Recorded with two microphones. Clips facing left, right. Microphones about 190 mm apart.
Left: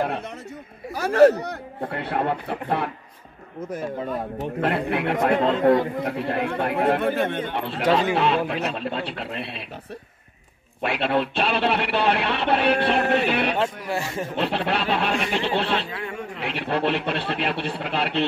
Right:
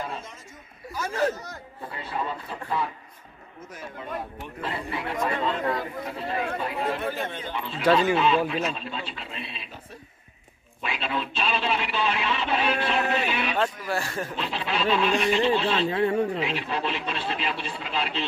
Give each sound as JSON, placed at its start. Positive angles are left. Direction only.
{"t": 0.0, "sound": "speech", "side_deg": 65}
{"t": 4.6, "sound": "speech", "side_deg": 65}
{"t": 10.8, "sound": "speech", "side_deg": 65}
{"t": 13.8, "sound": "speech", "side_deg": 20}
{"t": 14.3, "sound": "speech", "side_deg": 65}
{"t": 15.9, "sound": "speech", "side_deg": -35}
{"t": 16.3, "sound": "speech", "side_deg": 65}